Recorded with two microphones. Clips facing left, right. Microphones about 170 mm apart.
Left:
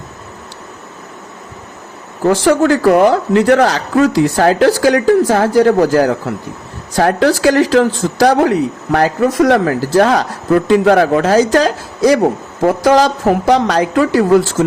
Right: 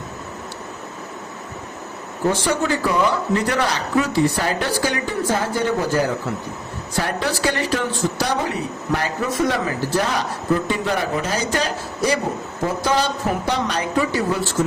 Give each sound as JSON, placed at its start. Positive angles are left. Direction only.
{"t": 2.2, "sound": "speech", "side_deg": 90}
{"t": 2.9, "sound": "speech", "side_deg": 75}
{"t": 4.1, "sound": "speech", "side_deg": 90}